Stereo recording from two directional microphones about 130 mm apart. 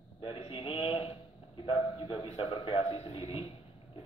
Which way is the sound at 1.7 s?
40° left (ahead or behind).